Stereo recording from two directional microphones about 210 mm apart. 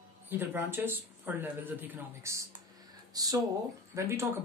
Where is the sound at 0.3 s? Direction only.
10° right (ahead or behind).